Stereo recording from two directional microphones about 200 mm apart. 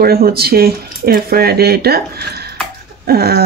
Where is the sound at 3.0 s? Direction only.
50° right (ahead or behind).